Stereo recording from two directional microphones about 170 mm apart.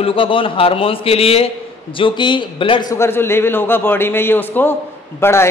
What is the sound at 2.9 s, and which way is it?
A man's voice, 15° left (ahead or behind).